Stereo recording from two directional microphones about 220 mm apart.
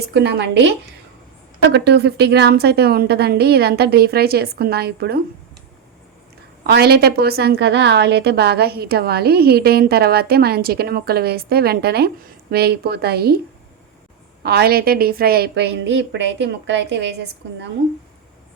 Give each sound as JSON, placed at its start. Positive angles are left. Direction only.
{"t": 0.1, "sound": "a woman's voice", "side_deg": -50}
{"t": 1.7, "sound": "a woman's voice", "side_deg": -50}
{"t": 6.7, "sound": "a woman's voice", "side_deg": -45}
{"t": 14.4, "sound": "a woman's voice", "side_deg": -45}